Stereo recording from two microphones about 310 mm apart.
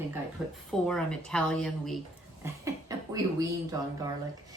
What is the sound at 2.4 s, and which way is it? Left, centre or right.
Speech, centre.